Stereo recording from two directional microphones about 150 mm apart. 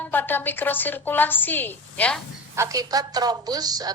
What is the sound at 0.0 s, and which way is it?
A woman's voice, 15° left (ahead or behind).